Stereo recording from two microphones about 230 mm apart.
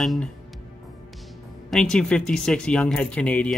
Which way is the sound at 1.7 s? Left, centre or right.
Centre.